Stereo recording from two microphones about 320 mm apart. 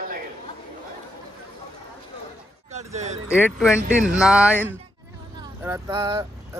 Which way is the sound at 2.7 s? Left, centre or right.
Right.